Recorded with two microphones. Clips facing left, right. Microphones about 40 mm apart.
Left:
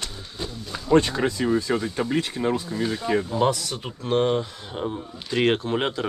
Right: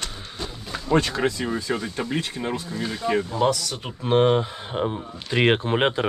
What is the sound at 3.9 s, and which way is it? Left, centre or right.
Speech, right.